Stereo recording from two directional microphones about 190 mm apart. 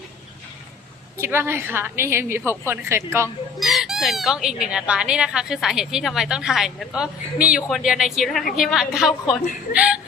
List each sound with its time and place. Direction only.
1.2 s a woman's voice: 10° right (ahead or behind)
3.6 s speech: centre (ahead or behind)